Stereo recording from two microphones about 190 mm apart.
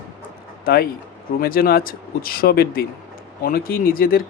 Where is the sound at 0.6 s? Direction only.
50° left (ahead or behind).